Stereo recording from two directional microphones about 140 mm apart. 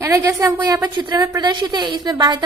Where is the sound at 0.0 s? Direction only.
20° right (ahead or behind).